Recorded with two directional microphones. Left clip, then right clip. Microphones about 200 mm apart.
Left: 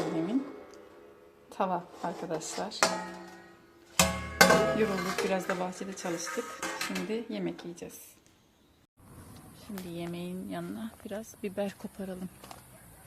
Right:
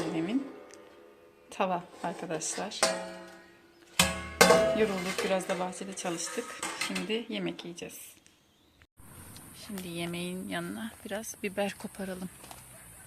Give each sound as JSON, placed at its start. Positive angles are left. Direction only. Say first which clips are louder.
{"t": 0.1, "sound": "music", "louder": "left 1 dB", "side_deg": 0}
{"t": 1.5, "sound": "a woman's voice", "louder": "even", "side_deg": 0}
{"t": 3.9, "sound": "music", "louder": "even", "side_deg": 50}
{"t": 4.8, "sound": "a woman's voice", "louder": "even", "side_deg": 0}
{"t": 9.7, "sound": "speech", "louder": "right 2 dB", "side_deg": -10}